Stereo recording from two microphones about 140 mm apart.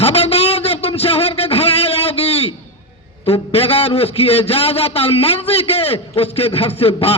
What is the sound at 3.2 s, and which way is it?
A man's voice, 45° left (ahead or behind).